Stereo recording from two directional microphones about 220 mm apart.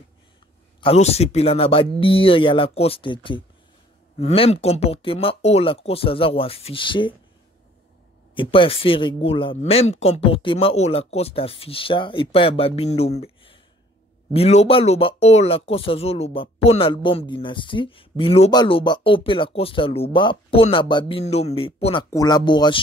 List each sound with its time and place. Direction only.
0.7 s speech: 25° left (ahead or behind)
8.4 s speech: 25° left (ahead or behind)